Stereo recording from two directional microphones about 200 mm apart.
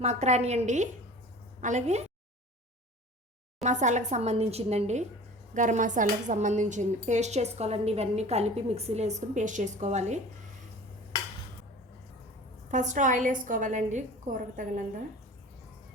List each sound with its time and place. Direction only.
0.0 s a woman's voice: 35° right (ahead or behind)
3.6 s a woman's voice: 35° right (ahead or behind)
12.7 s a woman's voice: 40° right (ahead or behind)